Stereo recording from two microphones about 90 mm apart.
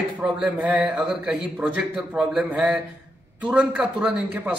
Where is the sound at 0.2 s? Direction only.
15° right (ahead or behind).